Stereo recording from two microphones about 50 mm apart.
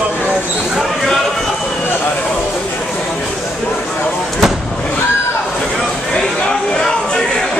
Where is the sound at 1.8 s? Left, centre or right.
Left.